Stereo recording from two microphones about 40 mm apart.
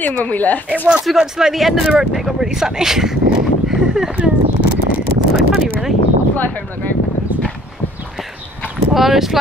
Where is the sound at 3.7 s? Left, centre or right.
Centre.